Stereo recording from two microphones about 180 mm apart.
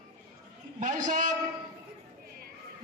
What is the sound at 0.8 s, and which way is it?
Speech, 45° right (ahead or behind).